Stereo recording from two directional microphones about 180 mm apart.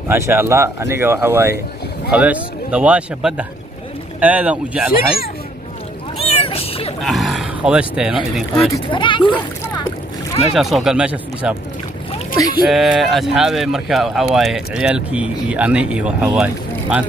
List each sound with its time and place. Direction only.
0.1 s speech: 15° right (ahead or behind)
6.1 s cat: 35° left (ahead or behind)
7.0 s speech: centre (ahead or behind)
8.8 s speech: 25° left (ahead or behind)
10.5 s speech: centre (ahead or behind)
12.6 s speech: centre (ahead or behind)